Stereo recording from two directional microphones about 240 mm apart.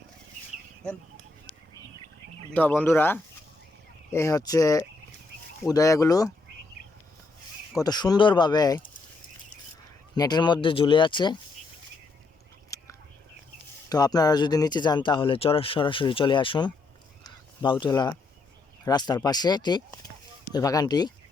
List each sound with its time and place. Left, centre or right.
2.5 s speech: centre
7.8 s speech: centre
10.2 s speech: centre
12.7 s whispering: centre
13.9 s speech: centre
17.2 s a sound: centre
18.9 s speech: centre